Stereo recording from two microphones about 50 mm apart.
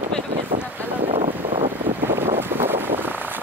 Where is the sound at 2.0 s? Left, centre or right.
Right.